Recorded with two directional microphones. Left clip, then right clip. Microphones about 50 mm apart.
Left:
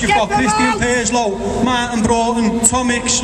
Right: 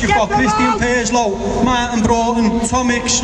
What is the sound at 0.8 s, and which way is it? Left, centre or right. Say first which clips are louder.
A man's voice: right 1 dB; centre.